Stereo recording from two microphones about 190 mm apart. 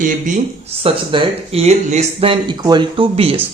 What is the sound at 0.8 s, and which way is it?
Speech, 30° right (ahead or behind).